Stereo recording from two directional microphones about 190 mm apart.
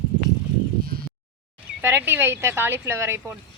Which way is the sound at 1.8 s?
10° right (ahead or behind).